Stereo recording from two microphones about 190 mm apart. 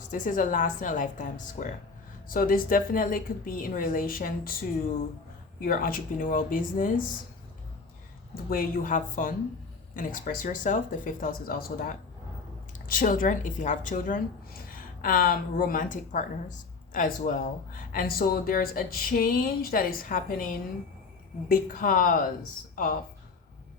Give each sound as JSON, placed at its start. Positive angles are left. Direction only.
{"t": 0.1, "sound": "speech", "side_deg": 45}
{"t": 5.5, "sound": "speech", "side_deg": 50}
{"t": 8.4, "sound": "speech", "side_deg": 50}
{"t": 21.5, "sound": "a woman's voice", "side_deg": 45}